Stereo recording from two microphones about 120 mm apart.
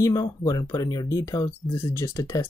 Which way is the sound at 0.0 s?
30° left (ahead or behind).